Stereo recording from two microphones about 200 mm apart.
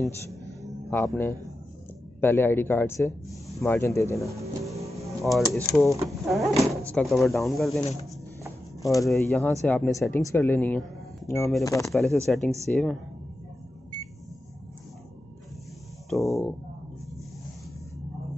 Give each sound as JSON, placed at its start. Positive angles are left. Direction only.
{"t": 0.3, "sound": "music", "side_deg": -15}
{"t": 0.8, "sound": "speech", "side_deg": 10}
{"t": 5.2, "sound": "speech", "side_deg": 0}
{"t": 5.7, "sound": "speech", "side_deg": 15}
{"t": 6.0, "sound": "speech", "side_deg": 0}
{"t": 8.8, "sound": "speech", "side_deg": 15}
{"t": 11.9, "sound": "speech", "side_deg": 0}
{"t": 16.1, "sound": "a sound", "side_deg": 0}